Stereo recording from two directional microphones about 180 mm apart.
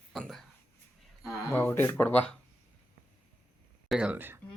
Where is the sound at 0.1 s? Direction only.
Centre (ahead or behind).